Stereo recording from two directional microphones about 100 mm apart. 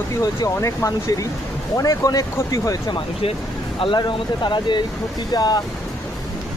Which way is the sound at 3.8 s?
50° left (ahead or behind).